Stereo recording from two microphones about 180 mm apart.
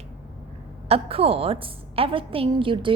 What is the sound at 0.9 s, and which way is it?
A woman's voice, 35° right (ahead or behind).